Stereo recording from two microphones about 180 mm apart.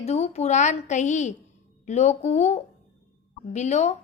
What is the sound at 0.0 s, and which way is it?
A woman's voice, 40° left (ahead or behind).